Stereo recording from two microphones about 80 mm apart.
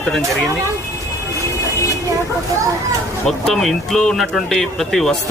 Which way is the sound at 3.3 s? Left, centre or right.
Centre.